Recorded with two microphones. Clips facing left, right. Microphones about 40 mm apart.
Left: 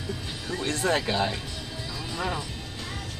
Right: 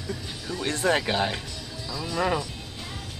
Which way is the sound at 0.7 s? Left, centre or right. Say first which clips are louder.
Right 2 dB; right.